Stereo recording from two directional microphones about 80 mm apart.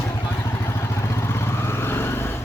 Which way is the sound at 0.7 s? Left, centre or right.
Left.